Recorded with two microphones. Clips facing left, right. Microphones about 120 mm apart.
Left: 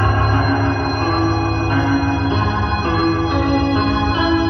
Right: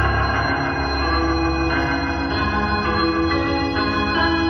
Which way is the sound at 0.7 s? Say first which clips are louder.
Left 3 dB; 30° left (ahead or behind).